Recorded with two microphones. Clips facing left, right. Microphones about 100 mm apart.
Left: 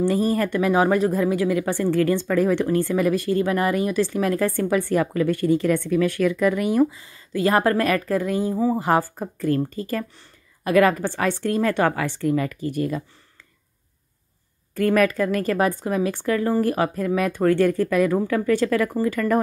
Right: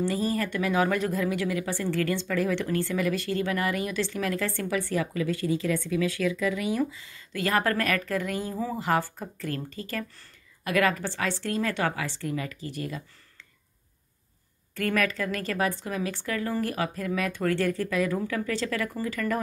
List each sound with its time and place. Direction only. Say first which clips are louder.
0.0 s speech: left 7 dB; 45° left (ahead or behind)
2.0 s speech: left 7 dB; 40° left (ahead or behind)
8.4 s speech: left 9 dB; 20° left (ahead or behind)
8.7 s speech: left 6 dB; 40° left (ahead or behind)
14.7 s speech: left 8 dB; 35° left (ahead or behind)
18.4 s speech: left 9 dB; 50° left (ahead or behind)